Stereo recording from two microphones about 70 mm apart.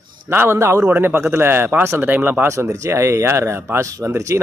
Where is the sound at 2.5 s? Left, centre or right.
Right.